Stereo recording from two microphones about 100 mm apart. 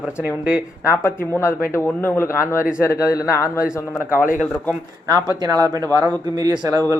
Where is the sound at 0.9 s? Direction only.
25° left (ahead or behind).